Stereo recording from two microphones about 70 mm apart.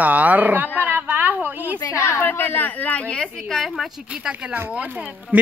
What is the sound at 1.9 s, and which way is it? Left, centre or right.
Speech, left.